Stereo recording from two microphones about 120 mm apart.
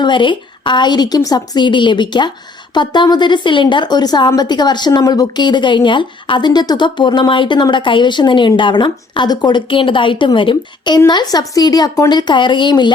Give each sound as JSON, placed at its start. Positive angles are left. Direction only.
{"t": 0.0, "sound": "a woman's voice", "side_deg": 40}